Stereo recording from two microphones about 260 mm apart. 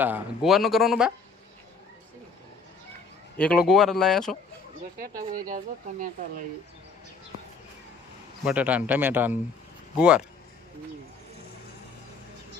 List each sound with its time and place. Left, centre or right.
0.0 s a man's voice: centre
3.3 s a man's voice: centre
5.5 s speech: right
8.4 s a man's voice: centre